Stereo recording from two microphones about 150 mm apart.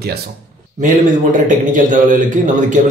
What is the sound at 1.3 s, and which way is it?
A man's voice, 60° right (ahead or behind).